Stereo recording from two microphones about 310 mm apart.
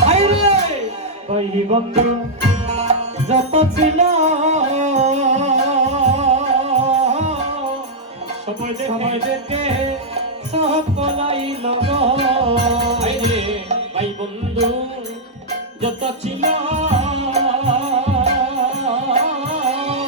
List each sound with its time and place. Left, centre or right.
0.0 s a sound: centre
1.4 s music: centre
8.6 s music: right
15.8 s music: right